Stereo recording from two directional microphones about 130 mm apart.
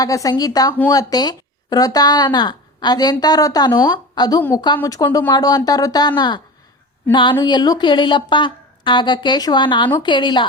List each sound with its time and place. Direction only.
0.0 s speech: 25° left (ahead or behind)